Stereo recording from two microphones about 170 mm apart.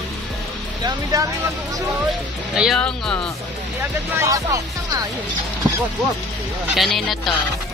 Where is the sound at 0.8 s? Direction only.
20° right (ahead or behind).